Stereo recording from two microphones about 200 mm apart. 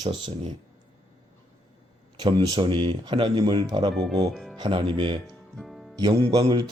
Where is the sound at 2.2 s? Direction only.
20° right (ahead or behind).